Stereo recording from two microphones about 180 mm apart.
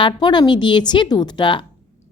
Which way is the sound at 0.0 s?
25° left (ahead or behind).